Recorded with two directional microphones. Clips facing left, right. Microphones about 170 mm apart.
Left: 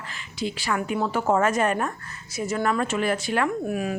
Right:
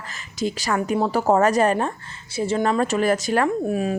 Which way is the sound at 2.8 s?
40° right (ahead or behind).